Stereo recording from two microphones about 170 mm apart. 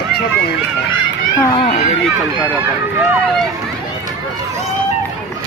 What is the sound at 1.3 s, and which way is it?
Speech, 20° left (ahead or behind).